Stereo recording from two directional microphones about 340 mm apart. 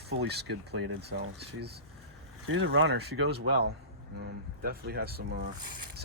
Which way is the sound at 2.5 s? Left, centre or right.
Right.